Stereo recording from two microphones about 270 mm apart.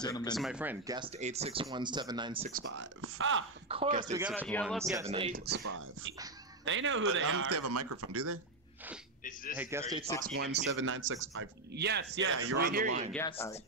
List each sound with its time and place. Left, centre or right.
0.0 s speech: centre
0.4 s speech: centre
2.5 s speech: right
3.6 s speech: right
4.2 s speech: centre
5.0 s speech: centre
5.3 s a man's voice: right
9.2 s a man's voice: left
9.6 s speech: centre
10.3 s speech: right
13.4 s speech: centre